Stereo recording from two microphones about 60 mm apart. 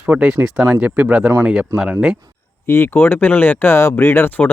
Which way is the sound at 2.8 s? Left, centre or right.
Left.